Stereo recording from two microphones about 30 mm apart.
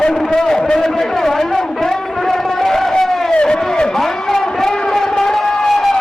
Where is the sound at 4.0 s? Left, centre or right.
Centre.